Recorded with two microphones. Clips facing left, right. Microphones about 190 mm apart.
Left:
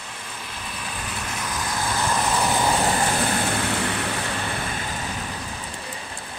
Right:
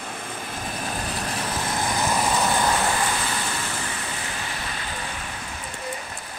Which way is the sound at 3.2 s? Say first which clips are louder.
Left 6 dB; 55° left (ahead or behind).